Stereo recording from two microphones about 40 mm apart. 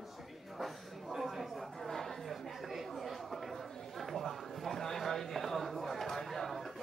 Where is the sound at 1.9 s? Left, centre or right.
Centre.